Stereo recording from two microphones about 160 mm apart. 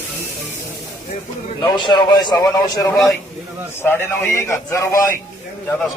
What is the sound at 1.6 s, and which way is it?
A man's voice, 30° left (ahead or behind).